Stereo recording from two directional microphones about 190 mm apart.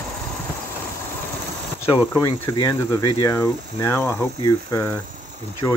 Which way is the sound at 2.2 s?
20° left (ahead or behind).